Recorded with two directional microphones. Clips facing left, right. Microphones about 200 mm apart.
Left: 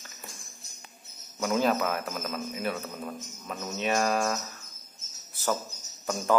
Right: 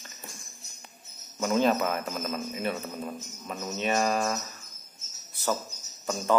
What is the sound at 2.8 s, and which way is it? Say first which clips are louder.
A man's voice: right 1 dB; 10° right (ahead or behind).